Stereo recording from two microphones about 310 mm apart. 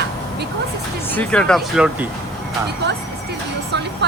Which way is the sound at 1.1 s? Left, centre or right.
Centre.